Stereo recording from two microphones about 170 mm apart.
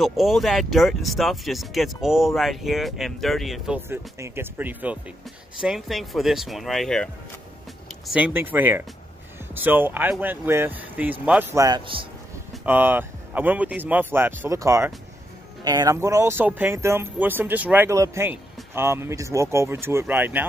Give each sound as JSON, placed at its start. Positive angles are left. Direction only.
{"t": 0.0, "sound": "speech", "side_deg": 0}
{"t": 8.1, "sound": "speech", "side_deg": -10}
{"t": 11.6, "sound": "a man's voice", "side_deg": -25}
{"t": 12.6, "sound": "speech", "side_deg": -10}